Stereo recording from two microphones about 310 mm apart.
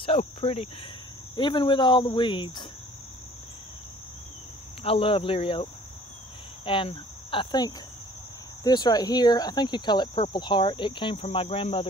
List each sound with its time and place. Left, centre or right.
0.0 s cricket: centre
1.3 s speech: centre
4.8 s speech: centre
6.6 s cricket: centre
8.6 s speech: centre